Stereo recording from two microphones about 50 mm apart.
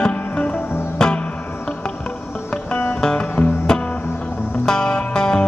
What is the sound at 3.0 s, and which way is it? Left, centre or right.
Music, centre.